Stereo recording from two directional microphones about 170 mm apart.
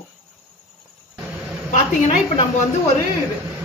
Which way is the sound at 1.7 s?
45° left (ahead or behind).